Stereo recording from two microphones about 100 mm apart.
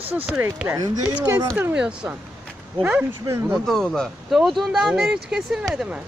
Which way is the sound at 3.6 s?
Centre (ahead or behind).